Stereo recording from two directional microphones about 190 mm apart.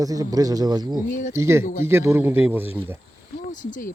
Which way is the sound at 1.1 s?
40° left (ahead or behind).